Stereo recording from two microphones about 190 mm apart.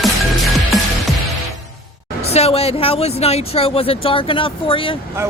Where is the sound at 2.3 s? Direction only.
30° left (ahead or behind).